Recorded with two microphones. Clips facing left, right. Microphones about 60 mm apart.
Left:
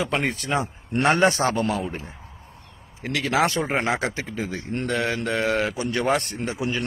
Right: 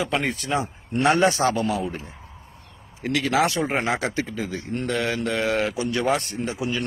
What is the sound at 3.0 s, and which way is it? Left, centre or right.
A man's voice, left.